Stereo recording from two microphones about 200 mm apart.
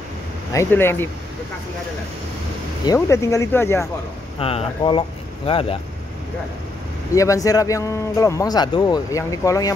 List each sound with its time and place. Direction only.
0.5 s speech: 15° left (ahead or behind)
2.8 s speech: 15° left (ahead or behind)
4.4 s speech: 30° left (ahead or behind)
7.2 s speech: 15° left (ahead or behind)